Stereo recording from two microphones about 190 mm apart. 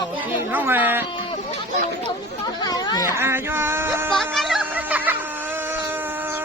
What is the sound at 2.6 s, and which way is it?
Speech, 20° left (ahead or behind).